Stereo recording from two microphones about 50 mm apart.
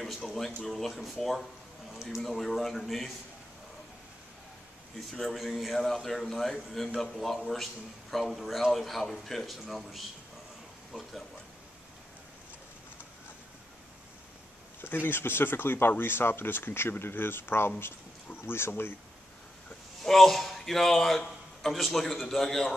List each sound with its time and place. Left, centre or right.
0.0 s a sound: centre
0.4 s a man's voice: centre
5.3 s a man's voice: centre
14.8 s speech: left
20.0 s a man's voice: centre